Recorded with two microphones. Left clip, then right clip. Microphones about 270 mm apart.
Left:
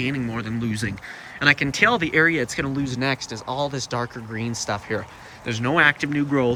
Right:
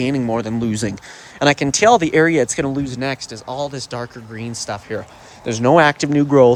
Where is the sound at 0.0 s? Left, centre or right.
Centre.